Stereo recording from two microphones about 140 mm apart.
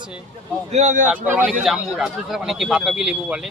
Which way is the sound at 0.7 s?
60° right (ahead or behind).